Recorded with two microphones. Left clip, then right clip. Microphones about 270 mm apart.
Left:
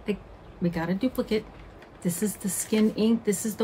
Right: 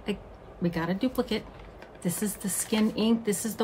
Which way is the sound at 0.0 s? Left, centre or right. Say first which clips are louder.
Left 2 dB; centre.